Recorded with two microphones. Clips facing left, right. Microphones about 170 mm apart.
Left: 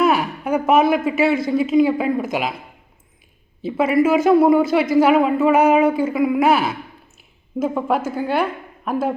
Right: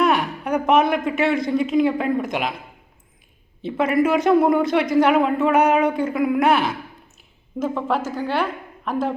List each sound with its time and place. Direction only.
0.0 s a man's voice: 5° left (ahead or behind)
3.6 s a woman's voice: 5° left (ahead or behind)